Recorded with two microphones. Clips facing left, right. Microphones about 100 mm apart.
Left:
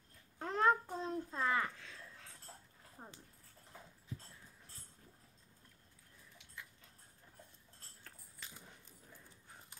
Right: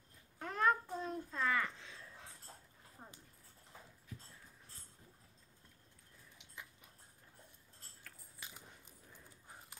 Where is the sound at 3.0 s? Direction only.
20° left (ahead or behind).